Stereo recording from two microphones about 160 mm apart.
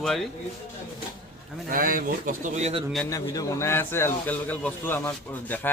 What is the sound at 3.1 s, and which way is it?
Speech, 20° left (ahead or behind).